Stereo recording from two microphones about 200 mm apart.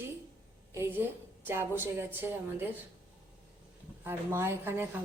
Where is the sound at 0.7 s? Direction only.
10° right (ahead or behind).